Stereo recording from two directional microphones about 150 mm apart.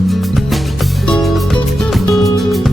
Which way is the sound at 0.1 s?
Centre (ahead or behind).